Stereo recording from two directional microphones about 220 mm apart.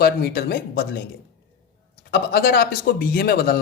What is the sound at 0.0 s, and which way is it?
Speech, 45° left (ahead or behind).